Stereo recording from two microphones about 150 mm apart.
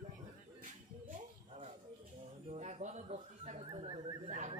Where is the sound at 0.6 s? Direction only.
60° right (ahead or behind).